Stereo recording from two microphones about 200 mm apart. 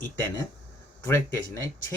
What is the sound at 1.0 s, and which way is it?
Speech, 15° left (ahead or behind).